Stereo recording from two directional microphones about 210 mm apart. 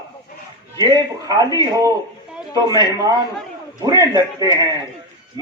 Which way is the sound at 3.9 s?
20° left (ahead or behind).